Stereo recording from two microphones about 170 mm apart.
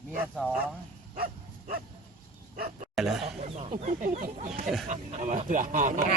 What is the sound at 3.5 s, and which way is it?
Speech, 45° right (ahead or behind).